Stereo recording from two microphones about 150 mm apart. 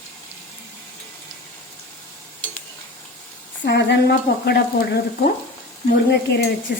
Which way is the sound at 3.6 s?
90° left.